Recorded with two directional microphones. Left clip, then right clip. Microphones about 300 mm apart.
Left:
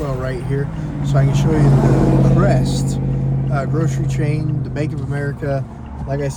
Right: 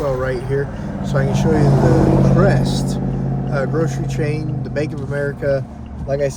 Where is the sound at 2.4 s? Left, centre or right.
Centre.